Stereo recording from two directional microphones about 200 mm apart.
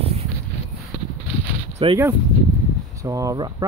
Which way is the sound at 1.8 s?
25° right (ahead or behind).